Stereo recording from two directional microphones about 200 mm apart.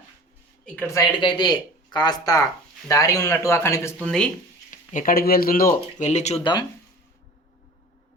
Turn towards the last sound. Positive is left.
turn(degrees=35)  # may be behind; listen again after turning